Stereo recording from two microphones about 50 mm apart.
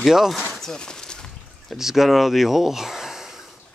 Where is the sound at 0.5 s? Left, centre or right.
Centre.